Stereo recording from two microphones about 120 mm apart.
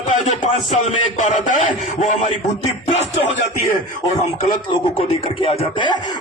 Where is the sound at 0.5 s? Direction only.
75° left (ahead or behind).